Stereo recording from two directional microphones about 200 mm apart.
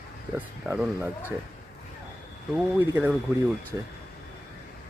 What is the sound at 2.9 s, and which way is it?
Speech, 5° right (ahead or behind).